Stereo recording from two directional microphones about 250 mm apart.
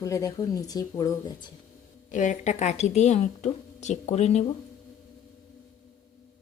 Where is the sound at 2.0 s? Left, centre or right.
Left.